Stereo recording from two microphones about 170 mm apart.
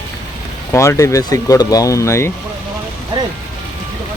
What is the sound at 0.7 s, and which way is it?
Speech, 15° left (ahead or behind).